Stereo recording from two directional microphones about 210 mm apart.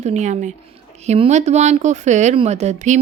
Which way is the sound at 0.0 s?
35° right (ahead or behind).